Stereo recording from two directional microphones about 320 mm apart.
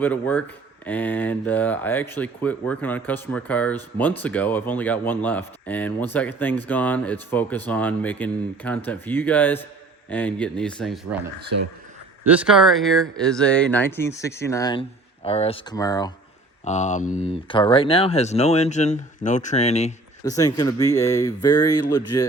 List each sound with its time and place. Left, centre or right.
0.0 s speech: centre
12.2 s speech: centre
16.6 s speech: left